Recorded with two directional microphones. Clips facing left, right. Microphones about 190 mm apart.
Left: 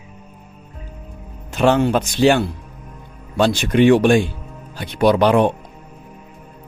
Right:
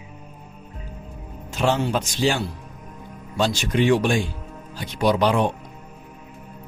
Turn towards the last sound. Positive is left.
turn(degrees=60)  # may be behind; listen again after turning